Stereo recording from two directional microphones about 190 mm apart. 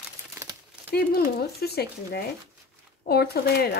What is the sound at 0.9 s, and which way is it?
Speech, 55° left (ahead or behind).